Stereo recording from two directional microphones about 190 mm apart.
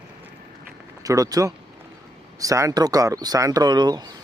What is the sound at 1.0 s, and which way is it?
A man's voice, 20° right (ahead or behind).